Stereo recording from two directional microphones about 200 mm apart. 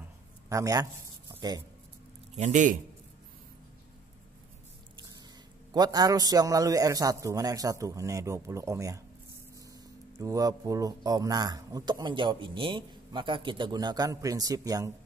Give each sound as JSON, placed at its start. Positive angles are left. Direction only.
{"t": 0.5, "sound": "a man's voice", "side_deg": -15}
{"t": 1.3, "sound": "a sound", "side_deg": -20}
{"t": 2.3, "sound": "a man's voice", "side_deg": -35}
{"t": 5.7, "sound": "a man's voice", "side_deg": -20}
{"t": 10.1, "sound": "a man's voice", "side_deg": -15}